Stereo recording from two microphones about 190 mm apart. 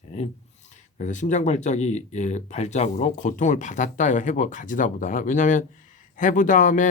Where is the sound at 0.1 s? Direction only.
35° left (ahead or behind).